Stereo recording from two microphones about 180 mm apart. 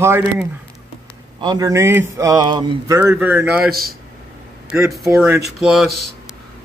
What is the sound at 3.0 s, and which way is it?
Speech, 10° right (ahead or behind).